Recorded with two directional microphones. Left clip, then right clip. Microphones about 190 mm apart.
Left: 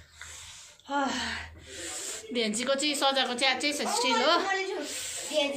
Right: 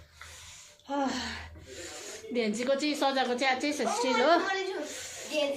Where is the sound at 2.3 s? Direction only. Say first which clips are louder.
Even; 20° right (ahead or behind); by 4.4 s 35° right (ahead or behind).